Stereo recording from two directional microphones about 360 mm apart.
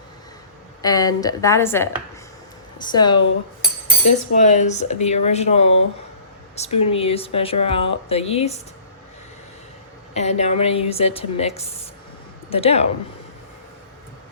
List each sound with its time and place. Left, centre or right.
0.8 s speech: centre
10.2 s speech: centre